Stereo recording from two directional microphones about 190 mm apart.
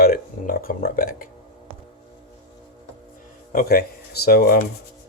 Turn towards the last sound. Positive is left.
turn(degrees=50)  # may be behind; listen again after turning